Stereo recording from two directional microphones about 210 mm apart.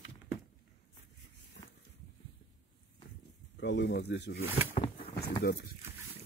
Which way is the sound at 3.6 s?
55° left (ahead or behind).